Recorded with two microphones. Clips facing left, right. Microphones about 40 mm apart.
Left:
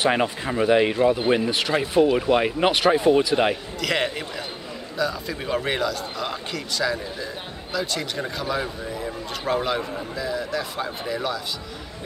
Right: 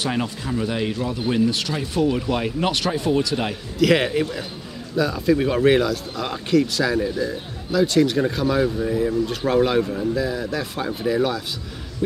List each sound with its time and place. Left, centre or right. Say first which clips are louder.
0.0 s speech: left 3 dB; left
3.8 s speech: right 7 dB; centre